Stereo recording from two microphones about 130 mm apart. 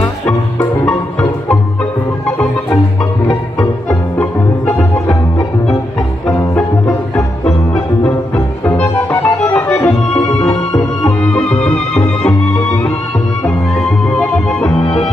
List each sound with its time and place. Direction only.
0.3 s music: 15° left (ahead or behind)
4.2 s music: 10° left (ahead or behind)
6.2 s music: 10° left (ahead or behind)
9.2 s music: 10° left (ahead or behind)
10.5 s music: 30° left (ahead or behind)
11.1 s music: 10° left (ahead or behind)
14.0 s music: 10° left (ahead or behind)